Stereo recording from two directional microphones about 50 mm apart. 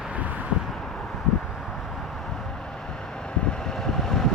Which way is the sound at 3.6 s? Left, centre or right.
Centre.